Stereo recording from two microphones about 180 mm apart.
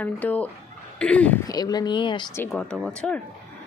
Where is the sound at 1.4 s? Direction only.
20° left (ahead or behind).